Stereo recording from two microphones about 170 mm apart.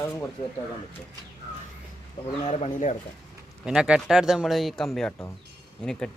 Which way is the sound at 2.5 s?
35° left (ahead or behind).